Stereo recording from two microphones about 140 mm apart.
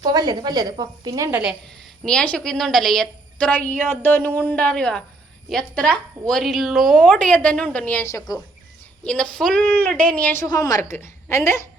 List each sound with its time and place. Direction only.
0.0 s a woman's voice: 30° right (ahead or behind)
1.3 s a woman's voice: 10° right (ahead or behind)
1.8 s a woman's voice: 5° left (ahead or behind)
9.0 s a woman's voice: 5° left (ahead or behind)
10.4 s a woman's voice: 25° left (ahead or behind)